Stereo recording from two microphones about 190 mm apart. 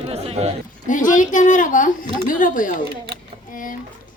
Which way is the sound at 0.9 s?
45° left (ahead or behind).